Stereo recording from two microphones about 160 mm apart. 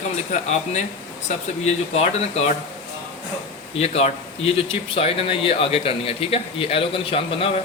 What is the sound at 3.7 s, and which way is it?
Speech, 40° left (ahead or behind).